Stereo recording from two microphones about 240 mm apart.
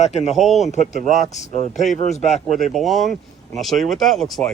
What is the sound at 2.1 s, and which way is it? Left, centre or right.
Speech, left.